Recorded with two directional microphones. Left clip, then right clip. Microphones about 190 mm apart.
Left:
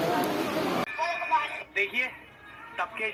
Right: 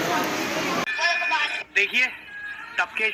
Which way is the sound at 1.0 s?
30° right (ahead or behind).